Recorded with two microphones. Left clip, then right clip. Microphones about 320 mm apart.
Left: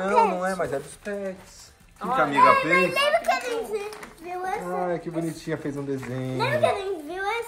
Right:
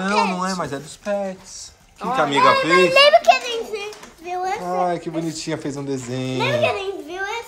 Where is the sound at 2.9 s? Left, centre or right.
Right.